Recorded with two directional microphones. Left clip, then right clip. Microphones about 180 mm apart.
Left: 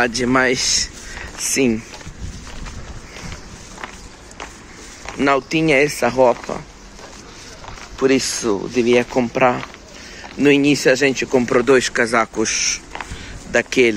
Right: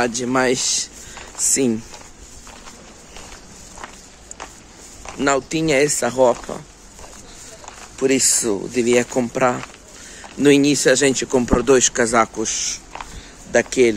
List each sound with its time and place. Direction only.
0.0 s speech: 10° right (ahead or behind)
1.5 s speech: 30° right (ahead or behind)
5.2 s speech: 25° right (ahead or behind)
8.0 s speech: 30° right (ahead or behind); by 13.9 s 15° right (ahead or behind)